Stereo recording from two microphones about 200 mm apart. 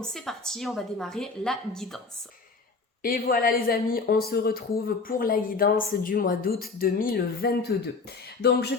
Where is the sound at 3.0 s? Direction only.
50° left (ahead or behind).